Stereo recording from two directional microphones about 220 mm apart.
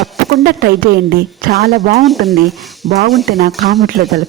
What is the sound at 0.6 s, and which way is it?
A woman's voice, 40° right (ahead or behind).